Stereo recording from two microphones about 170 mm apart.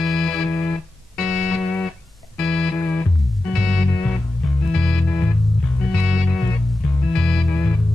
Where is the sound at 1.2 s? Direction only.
Centre (ahead or behind).